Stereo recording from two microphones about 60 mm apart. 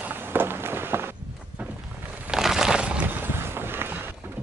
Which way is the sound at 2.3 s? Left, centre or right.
Centre.